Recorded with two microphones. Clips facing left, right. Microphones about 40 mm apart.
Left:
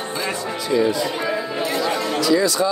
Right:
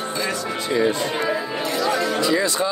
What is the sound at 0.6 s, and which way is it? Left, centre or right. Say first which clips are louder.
Speech: left 2 dB; right.